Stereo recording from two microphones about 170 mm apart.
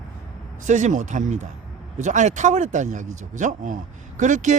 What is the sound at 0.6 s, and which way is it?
Speech, 45° right (ahead or behind).